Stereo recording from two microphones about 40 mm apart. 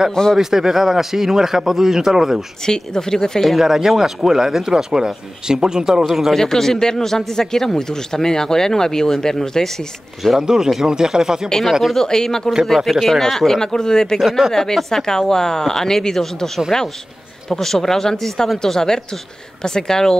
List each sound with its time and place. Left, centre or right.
0.1 s a man's voice: centre
0.4 s speech: centre
2.6 s a man's voice: centre
3.4 s speech: centre
6.0 s speech: centre
6.3 s a man's voice: centre
10.4 s speech: centre
11.4 s a man's voice: centre
12.6 s a man's voice: centre
14.1 s a man's voice: centre